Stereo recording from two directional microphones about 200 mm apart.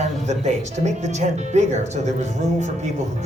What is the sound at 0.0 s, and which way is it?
Music, 35° right (ahead or behind).